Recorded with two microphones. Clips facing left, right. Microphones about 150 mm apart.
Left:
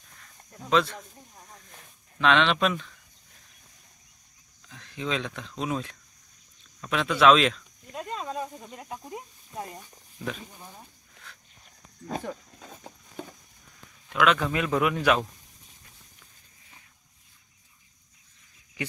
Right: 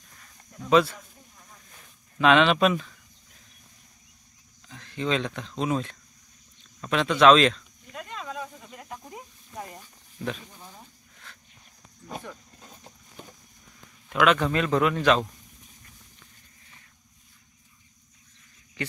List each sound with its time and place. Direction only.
0.7 s speech: 5° right (ahead or behind)
2.1 s speech: 5° right (ahead or behind)
4.6 s speech: centre (ahead or behind)
7.9 s snake: 35° left (ahead or behind)
8.9 s snake: 15° left (ahead or behind)
14.0 s a man's voice: centre (ahead or behind)
14.5 s speech: 10° left (ahead or behind)